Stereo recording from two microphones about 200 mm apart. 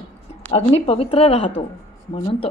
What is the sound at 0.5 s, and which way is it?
A woman's voice, 30° left (ahead or behind).